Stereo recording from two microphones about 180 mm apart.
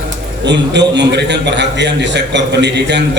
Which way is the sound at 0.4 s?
75° right (ahead or behind).